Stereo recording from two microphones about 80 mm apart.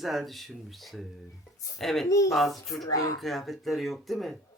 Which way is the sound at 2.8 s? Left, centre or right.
Left.